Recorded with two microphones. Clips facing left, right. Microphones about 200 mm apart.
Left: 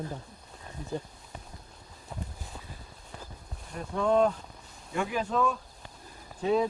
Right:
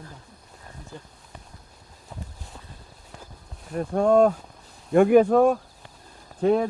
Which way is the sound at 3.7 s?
50° right (ahead or behind).